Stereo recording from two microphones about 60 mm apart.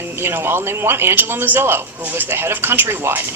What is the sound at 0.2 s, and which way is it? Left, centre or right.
Speech, right.